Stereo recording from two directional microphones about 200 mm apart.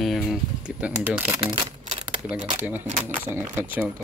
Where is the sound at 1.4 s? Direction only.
25° right (ahead or behind).